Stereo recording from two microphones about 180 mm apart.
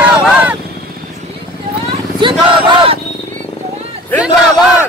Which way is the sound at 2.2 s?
25° right (ahead or behind).